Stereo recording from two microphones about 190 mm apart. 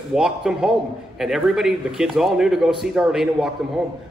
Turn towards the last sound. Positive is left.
turn(degrees=0)  # may be behind; listen again after turning